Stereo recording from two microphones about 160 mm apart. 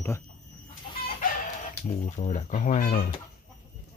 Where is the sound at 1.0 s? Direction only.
55° left (ahead or behind).